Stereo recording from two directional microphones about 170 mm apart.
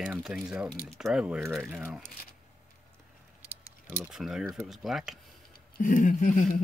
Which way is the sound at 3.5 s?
10° right (ahead or behind).